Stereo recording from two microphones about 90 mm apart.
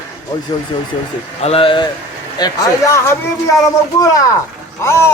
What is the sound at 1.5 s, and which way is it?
Speech, 80° left.